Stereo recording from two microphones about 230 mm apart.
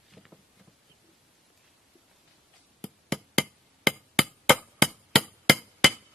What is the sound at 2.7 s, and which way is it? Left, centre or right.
Hammer, centre.